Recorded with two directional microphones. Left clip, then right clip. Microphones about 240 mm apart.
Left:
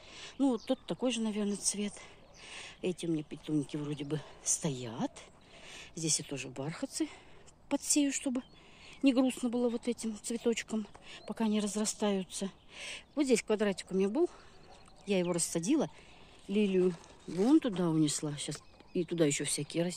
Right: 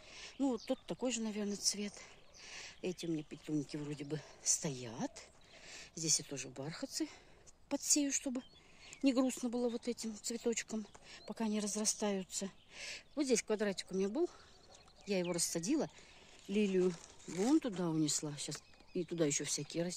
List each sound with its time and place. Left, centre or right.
0.1 s speech: centre
16.4 s speech: centre
17.5 s speech: centre